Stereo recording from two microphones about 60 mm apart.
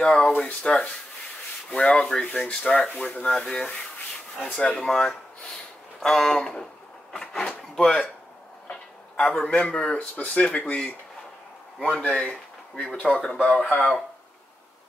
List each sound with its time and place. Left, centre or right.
0.0 s speech: centre
3.2 s speech: centre
7.1 s drawer open or close: centre
8.6 s a sound: centre
9.4 s speech: centre
12.1 s speech: centre